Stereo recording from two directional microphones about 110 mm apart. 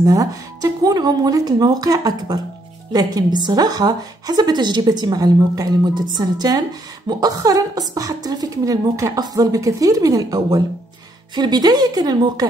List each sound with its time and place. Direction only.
0.0 s a woman's voice: 30° right (ahead or behind)